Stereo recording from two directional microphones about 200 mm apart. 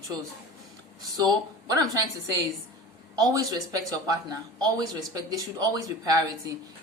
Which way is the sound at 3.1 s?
20° right (ahead or behind).